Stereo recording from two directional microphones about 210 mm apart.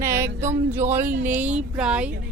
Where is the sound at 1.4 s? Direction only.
5° right (ahead or behind).